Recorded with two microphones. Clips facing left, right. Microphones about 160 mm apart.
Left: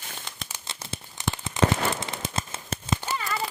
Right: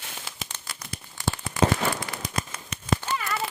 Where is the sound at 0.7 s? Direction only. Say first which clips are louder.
Left 2 dB; 25° left (ahead or behind).